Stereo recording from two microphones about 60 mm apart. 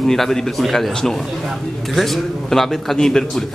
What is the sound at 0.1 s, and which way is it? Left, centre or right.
A man's voice, centre.